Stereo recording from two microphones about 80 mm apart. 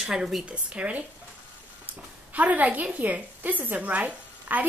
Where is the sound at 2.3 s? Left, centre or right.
Centre.